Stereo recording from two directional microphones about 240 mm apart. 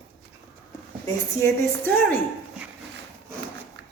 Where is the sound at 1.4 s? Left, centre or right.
Centre.